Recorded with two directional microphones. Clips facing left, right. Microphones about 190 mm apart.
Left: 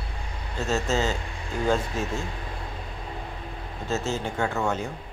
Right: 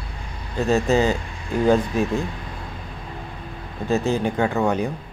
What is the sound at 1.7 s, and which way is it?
Speech, 60° right (ahead or behind).